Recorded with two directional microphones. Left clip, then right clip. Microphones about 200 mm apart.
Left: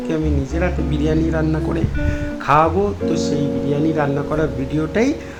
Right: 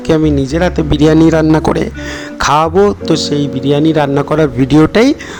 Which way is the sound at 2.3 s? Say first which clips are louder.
Right 4 dB; 55° right (ahead or behind).